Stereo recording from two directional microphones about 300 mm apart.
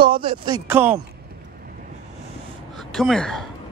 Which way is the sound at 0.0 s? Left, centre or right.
Centre.